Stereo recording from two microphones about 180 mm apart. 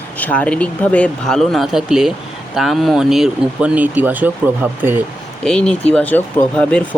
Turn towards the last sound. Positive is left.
turn(degrees=5)  # may be behind; listen again after turning